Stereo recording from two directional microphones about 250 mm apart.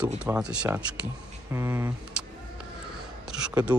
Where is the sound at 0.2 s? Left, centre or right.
Centre.